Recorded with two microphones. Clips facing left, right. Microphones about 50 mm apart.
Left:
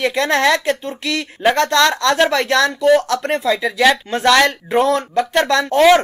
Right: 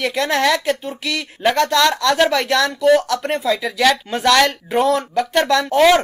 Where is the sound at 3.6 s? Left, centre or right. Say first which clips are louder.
Left 2 dB; centre.